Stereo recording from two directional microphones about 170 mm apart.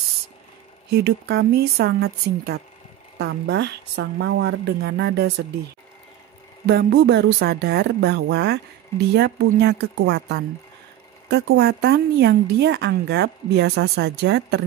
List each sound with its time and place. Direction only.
0.8 s a woman's voice: 75° right (ahead or behind)
6.6 s a woman's voice: 70° right (ahead or behind)